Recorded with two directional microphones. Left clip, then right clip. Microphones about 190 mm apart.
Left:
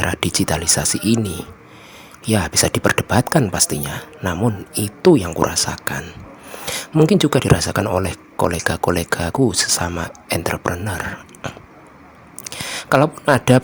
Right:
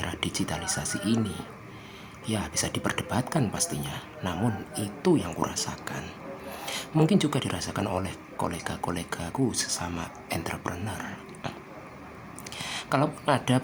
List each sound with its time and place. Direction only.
0.0 s a man's voice: 45° left (ahead or behind)
6.0 s whispering: 25° left (ahead or behind)
6.9 s a man's voice: 40° left (ahead or behind)
11.4 s speech: 30° left (ahead or behind)
12.5 s speech: 45° left (ahead or behind)